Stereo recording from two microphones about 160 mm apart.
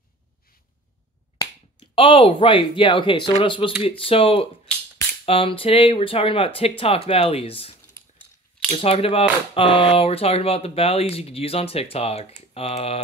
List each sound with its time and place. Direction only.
2.0 s speech: 35° left (ahead or behind)
8.7 s speech: 40° left (ahead or behind)